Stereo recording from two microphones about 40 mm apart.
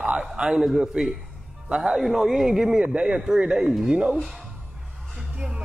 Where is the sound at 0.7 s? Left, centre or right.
Centre.